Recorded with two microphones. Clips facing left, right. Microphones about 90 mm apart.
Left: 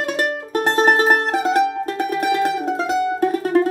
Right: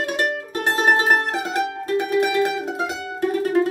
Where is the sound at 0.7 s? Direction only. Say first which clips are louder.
Left 2 dB; 35° left (ahead or behind).